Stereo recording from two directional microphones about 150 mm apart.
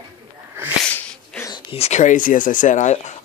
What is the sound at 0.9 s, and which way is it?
Sneeze, 10° left (ahead or behind).